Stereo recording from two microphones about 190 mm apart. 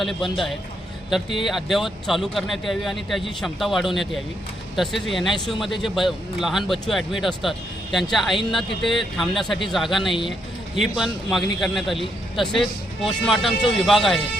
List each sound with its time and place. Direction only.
0.0 s a man's voice: centre (ahead or behind)